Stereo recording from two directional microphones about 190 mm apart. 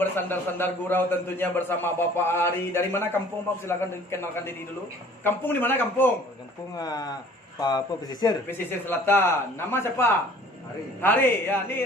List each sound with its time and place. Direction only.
0.0 s a man's voice: 10° left (ahead or behind)